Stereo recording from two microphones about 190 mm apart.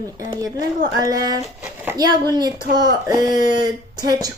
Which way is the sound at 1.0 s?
20° right (ahead or behind).